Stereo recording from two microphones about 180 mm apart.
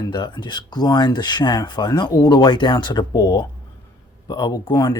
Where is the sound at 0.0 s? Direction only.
25° left (ahead or behind).